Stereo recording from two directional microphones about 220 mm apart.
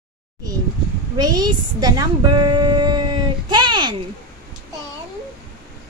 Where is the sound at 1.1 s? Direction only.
15° right (ahead or behind).